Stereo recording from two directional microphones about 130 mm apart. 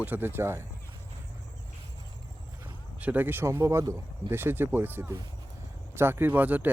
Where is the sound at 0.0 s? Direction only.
15° right (ahead or behind).